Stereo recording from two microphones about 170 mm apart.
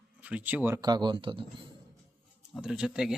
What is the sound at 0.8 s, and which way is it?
Speech, 25° right (ahead or behind).